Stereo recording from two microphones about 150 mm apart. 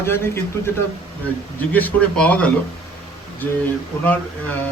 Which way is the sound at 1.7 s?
10° left (ahead or behind).